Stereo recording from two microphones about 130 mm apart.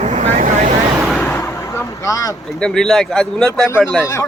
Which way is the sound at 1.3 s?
20° left (ahead or behind).